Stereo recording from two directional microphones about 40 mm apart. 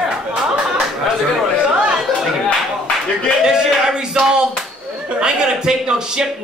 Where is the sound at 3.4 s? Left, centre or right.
Centre.